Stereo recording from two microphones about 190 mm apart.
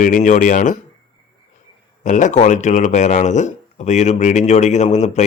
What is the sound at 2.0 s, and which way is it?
A man's voice, 40° left (ahead or behind).